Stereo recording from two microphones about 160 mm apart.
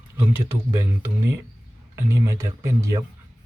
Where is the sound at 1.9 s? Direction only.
20° right (ahead or behind).